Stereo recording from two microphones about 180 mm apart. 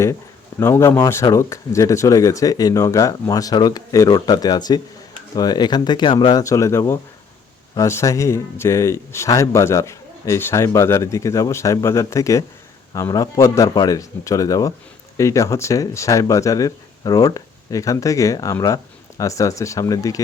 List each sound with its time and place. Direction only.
0.6 s speech: 15° left (ahead or behind)